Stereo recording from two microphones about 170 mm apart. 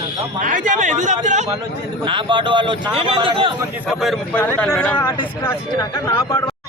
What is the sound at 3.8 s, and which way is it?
Speech, 5° right (ahead or behind).